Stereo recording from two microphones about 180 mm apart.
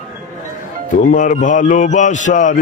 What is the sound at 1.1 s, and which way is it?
Mantra, 45° left (ahead or behind).